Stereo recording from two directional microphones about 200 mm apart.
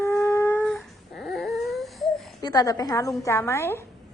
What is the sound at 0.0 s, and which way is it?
Dog, 15° left (ahead or behind).